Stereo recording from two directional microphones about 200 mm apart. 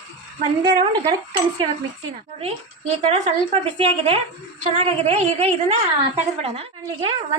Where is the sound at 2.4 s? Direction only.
35° right (ahead or behind).